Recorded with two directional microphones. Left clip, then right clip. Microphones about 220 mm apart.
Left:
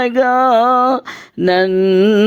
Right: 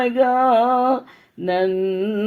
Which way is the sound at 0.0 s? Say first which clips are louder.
Left 4 dB; 50° left (ahead or behind).